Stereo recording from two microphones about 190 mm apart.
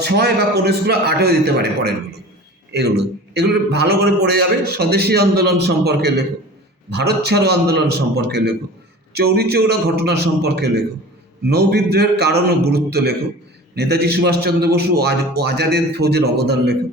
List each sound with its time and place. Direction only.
0.0 s a man's voice: 60° right (ahead or behind)
3.0 s a man's voice: 60° right (ahead or behind)